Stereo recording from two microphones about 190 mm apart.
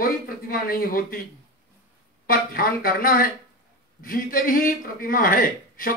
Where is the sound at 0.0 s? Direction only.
50° left (ahead or behind).